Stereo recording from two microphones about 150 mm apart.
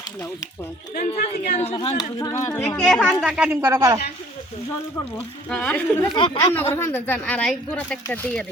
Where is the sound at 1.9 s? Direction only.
25° left (ahead or behind).